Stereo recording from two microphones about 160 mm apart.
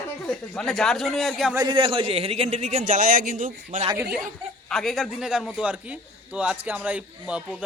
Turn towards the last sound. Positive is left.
turn(degrees=-10)  # may be behind; listen again after turning